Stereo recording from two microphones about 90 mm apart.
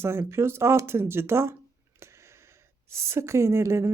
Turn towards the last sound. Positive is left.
turn(degrees=-30)  # may be behind; listen again after turning